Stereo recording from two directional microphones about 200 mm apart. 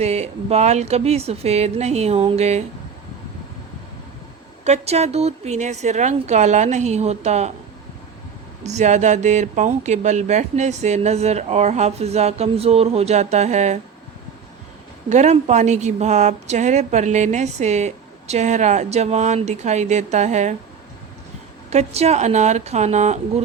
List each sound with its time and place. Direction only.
0.0 s a woman's voice: 30° right (ahead or behind)
4.6 s a woman's voice: 35° right (ahead or behind)
8.6 s a woman's voice: 35° right (ahead or behind)
15.1 s a woman's voice: 35° right (ahead or behind)
21.7 s a woman's voice: 35° right (ahead or behind)